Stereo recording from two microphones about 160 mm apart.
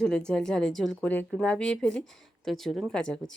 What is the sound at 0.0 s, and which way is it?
A woman's voice, 5° left (ahead or behind).